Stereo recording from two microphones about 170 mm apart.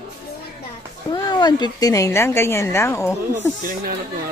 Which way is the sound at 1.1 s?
25° left (ahead or behind).